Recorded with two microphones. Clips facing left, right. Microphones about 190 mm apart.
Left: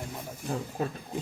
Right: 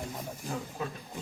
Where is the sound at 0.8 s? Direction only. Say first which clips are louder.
Left 6 dB; 40° left (ahead or behind).